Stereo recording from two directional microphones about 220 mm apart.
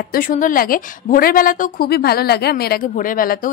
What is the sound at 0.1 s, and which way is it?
A woman's voice, 40° left (ahead or behind).